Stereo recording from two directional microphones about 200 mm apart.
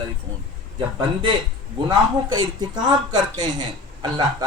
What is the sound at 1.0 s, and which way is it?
Speech, 25° right (ahead or behind).